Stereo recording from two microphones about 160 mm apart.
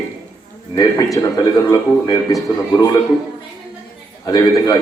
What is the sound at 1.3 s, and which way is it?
A man's voice, 25° left (ahead or behind).